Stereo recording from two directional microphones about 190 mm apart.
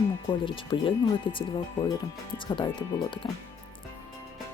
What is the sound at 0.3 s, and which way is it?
Speech, 25° left (ahead or behind).